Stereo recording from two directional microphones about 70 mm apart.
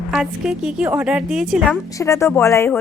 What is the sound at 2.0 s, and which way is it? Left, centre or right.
Speech, left.